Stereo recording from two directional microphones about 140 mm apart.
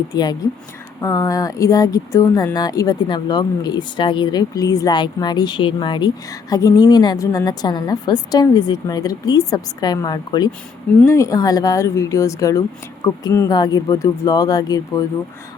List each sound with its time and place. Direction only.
0.1 s speech: 30° left (ahead or behind)